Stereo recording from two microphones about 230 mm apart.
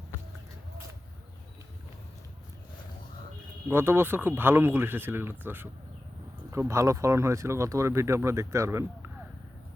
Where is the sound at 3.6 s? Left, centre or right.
Centre.